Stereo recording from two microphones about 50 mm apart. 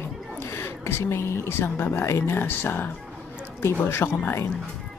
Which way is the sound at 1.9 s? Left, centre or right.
Left.